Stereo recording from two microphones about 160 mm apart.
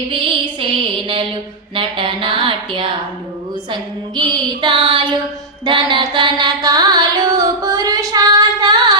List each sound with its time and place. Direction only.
0.1 s music: 30° right (ahead or behind)
1.7 s a sound: 35° right (ahead or behind)
3.7 s female singing: 30° right (ahead or behind)
5.6 s carnatic music: 30° right (ahead or behind)